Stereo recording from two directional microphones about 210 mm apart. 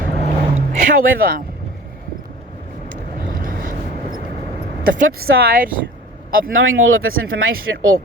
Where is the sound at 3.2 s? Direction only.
40° right (ahead or behind).